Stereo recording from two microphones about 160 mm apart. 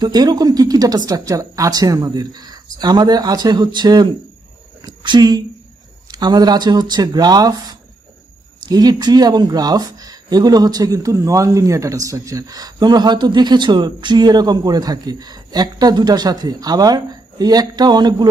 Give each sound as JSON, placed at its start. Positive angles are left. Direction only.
{"t": 0.0, "sound": "speech", "side_deg": -25}